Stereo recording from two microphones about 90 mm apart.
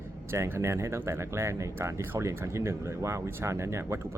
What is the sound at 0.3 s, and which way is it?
Speech, 25° right (ahead or behind).